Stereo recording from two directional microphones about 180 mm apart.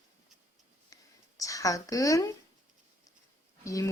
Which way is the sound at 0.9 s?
20° left (ahead or behind).